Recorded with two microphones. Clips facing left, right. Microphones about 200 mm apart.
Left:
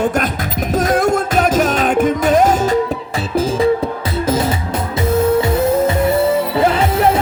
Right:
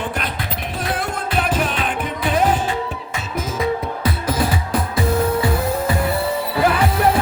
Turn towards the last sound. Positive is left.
turn(degrees=25)  # may be behind; listen again after turning